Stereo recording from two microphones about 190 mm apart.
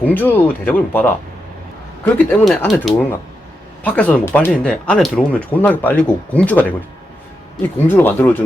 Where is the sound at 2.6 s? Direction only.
5° left (ahead or behind).